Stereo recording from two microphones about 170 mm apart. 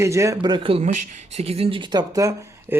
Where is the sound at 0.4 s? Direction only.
30° right (ahead or behind).